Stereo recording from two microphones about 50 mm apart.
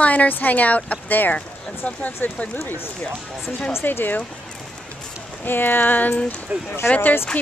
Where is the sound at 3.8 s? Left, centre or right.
Left.